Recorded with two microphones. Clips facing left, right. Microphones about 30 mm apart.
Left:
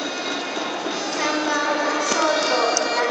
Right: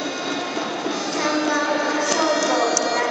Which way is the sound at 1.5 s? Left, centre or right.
Centre.